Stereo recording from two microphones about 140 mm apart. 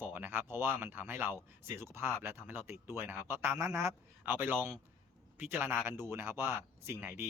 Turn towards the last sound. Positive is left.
turn(degrees=-15)  # may be behind; listen again after turning